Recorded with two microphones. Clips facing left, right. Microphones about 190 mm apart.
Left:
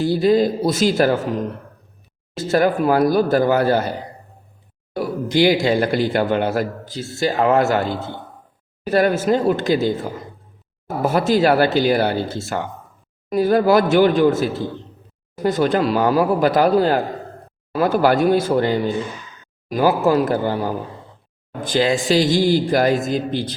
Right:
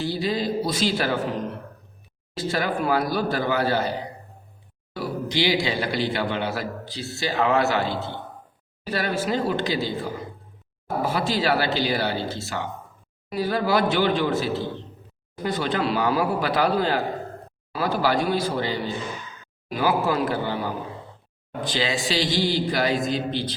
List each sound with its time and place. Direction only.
0.0 s a man's voice: 50° left (ahead or behind)
2.3 s a man's voice: 50° left (ahead or behind)
4.9 s a man's voice: 50° left (ahead or behind)